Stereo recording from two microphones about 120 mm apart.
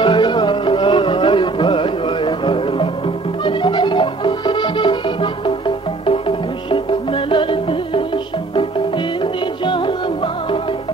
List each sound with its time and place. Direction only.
0.0 s music: 40° left (ahead or behind)